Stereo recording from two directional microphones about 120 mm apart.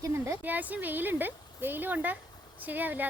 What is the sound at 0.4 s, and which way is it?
Speech, 15° right (ahead or behind).